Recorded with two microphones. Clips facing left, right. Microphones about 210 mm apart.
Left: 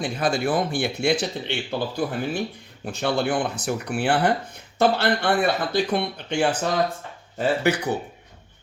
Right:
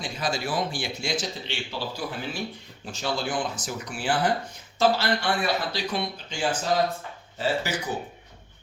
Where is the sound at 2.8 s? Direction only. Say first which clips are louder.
Left 6 dB; 60° left (ahead or behind).